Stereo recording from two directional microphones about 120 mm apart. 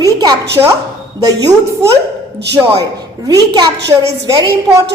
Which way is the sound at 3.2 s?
35° right (ahead or behind).